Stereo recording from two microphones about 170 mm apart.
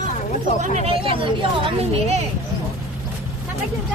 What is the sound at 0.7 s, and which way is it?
A woman's voice, 35° right (ahead or behind).